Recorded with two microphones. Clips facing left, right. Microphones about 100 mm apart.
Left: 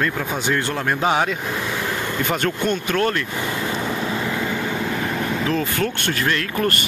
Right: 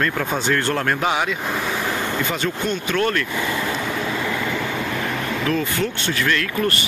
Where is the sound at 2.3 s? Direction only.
50° left (ahead or behind).